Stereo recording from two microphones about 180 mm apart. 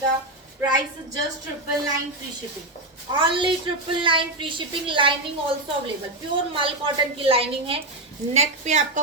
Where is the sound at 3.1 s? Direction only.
30° right (ahead or behind).